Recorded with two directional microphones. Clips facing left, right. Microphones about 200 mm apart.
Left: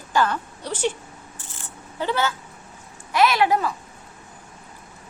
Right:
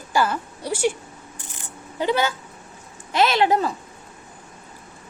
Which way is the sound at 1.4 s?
15° right (ahead or behind).